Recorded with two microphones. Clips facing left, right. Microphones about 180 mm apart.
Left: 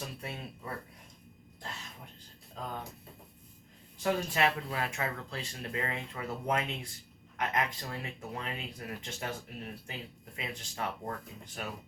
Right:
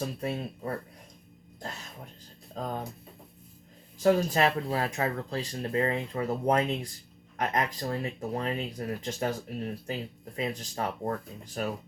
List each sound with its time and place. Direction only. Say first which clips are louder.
0.0 s speech: right 9 dB; 40° right (ahead or behind)
2.6 s speech: right 6 dB; 40° right (ahead or behind)
4.0 s speech: right 6 dB; 40° right (ahead or behind)